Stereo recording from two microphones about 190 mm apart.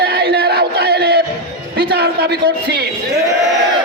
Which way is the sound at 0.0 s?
60° right (ahead or behind).